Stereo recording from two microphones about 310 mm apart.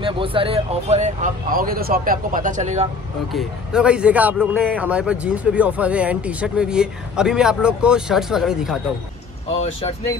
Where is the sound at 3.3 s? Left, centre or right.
Centre.